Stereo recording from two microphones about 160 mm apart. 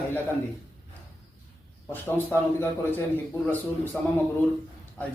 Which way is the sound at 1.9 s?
15° left (ahead or behind).